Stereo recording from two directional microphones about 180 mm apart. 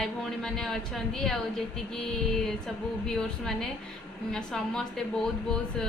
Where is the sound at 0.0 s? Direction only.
5° left (ahead or behind).